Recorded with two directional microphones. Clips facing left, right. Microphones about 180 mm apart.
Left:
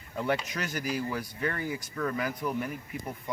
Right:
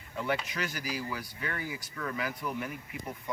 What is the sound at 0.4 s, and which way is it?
Speech, 45° left (ahead or behind).